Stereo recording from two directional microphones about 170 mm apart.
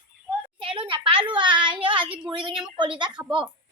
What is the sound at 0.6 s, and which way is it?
A child's voice, 30° right (ahead or behind).